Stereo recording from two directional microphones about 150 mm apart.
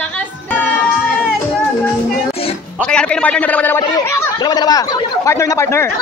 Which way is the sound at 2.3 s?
40° left (ahead or behind).